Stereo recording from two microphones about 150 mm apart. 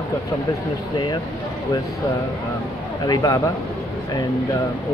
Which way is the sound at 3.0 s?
25° left (ahead or behind).